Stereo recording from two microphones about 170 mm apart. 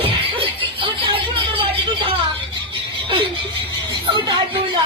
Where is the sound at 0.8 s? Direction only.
30° right (ahead or behind).